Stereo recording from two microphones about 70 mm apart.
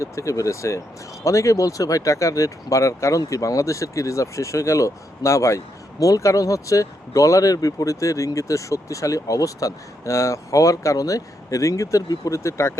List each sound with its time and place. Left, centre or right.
0.0 s speech: left